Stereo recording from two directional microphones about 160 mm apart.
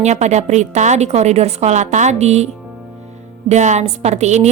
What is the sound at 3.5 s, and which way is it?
Speech, 45° right (ahead or behind).